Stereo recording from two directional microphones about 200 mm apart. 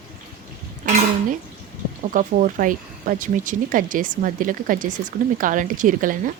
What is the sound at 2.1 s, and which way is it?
Speech, 40° right (ahead or behind).